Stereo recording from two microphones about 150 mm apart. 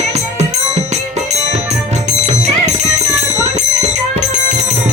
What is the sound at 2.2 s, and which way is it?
Music, 50° right (ahead or behind).